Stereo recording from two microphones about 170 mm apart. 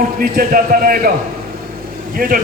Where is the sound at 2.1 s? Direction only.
55° right (ahead or behind).